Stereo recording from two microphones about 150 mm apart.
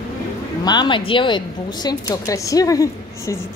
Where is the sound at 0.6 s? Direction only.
30° left (ahead or behind).